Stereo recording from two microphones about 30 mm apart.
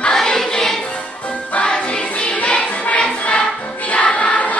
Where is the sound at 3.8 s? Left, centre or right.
Left.